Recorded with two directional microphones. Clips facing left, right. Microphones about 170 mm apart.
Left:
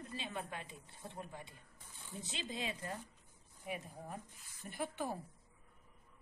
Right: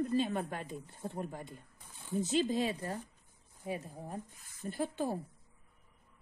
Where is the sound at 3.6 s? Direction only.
30° right (ahead or behind).